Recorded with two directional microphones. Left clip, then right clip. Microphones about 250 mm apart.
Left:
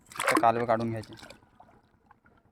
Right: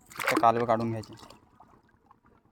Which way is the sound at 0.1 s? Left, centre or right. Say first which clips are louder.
Left 2 dB; centre.